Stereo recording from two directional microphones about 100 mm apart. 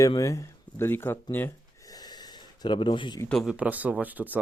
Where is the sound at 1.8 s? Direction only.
40° left (ahead or behind).